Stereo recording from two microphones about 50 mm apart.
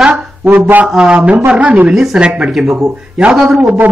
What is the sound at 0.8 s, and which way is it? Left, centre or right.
A man's voice, centre.